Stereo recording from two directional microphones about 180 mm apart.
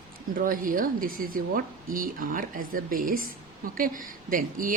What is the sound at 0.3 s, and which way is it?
A woman's voice, 50° right (ahead or behind).